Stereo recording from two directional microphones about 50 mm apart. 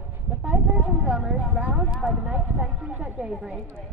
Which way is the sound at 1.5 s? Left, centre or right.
Right.